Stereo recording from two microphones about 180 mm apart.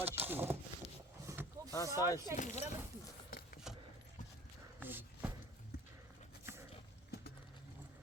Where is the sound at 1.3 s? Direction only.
15° right (ahead or behind).